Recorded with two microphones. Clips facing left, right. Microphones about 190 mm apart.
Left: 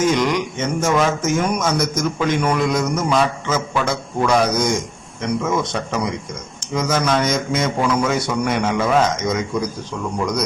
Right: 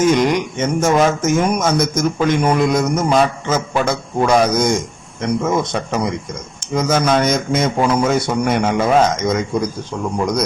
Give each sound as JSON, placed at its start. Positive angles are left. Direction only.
{"t": 0.2, "sound": "speech", "side_deg": -50}